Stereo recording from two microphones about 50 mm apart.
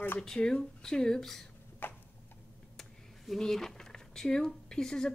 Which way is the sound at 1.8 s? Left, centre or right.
Left.